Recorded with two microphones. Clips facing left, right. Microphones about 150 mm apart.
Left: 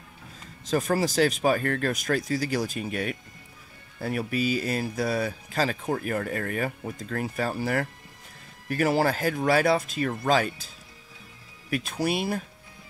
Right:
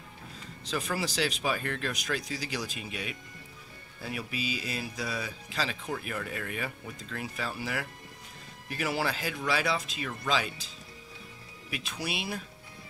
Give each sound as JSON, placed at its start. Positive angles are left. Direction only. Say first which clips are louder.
{"t": 0.7, "sound": "speech", "louder": "left 8 dB", "side_deg": 45}
{"t": 11.7, "sound": "speech", "louder": "left 9 dB", "side_deg": 50}